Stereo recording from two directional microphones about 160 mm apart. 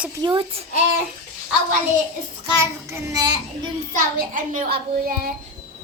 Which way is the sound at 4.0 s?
55° right (ahead or behind).